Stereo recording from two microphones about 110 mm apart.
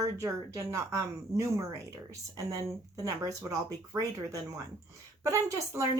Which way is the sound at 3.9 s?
20° right (ahead or behind).